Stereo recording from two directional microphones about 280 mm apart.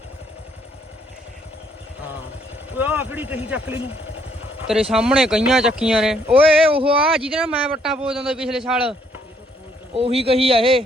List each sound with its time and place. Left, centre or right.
2.7 s speech: centre
4.6 s a man's voice: centre
6.3 s speech: centre
7.0 s a man's voice: centre
9.9 s speech: right